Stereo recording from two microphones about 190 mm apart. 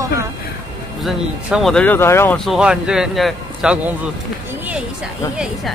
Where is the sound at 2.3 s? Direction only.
Centre (ahead or behind).